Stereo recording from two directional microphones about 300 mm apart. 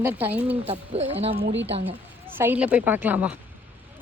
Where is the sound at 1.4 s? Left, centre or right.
Right.